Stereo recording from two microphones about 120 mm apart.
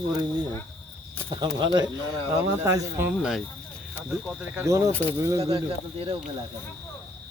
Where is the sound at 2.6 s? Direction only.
25° right (ahead or behind).